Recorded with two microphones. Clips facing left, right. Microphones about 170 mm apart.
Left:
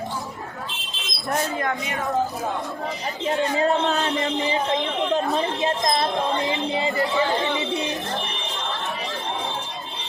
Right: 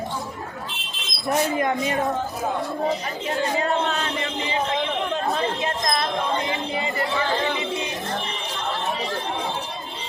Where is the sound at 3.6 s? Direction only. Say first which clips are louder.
Left 3 dB; 35° left (ahead or behind).